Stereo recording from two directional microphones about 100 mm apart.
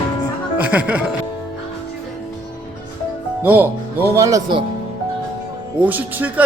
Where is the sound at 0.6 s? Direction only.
15° right (ahead or behind).